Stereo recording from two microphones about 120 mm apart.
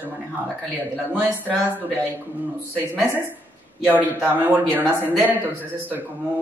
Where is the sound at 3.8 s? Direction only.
15° right (ahead or behind).